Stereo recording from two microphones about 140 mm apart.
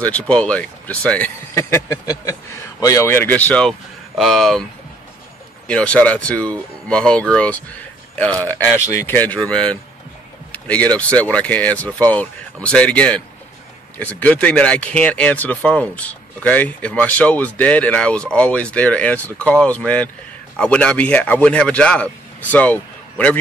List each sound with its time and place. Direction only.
0.0 s speech: 10° left (ahead or behind)
5.7 s speech: 10° left (ahead or behind)
10.5 s vehicle: 10° left (ahead or behind)
11.0 s speech: 10° left (ahead or behind)